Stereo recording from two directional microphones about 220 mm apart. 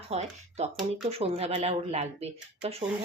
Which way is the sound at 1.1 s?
25° right (ahead or behind).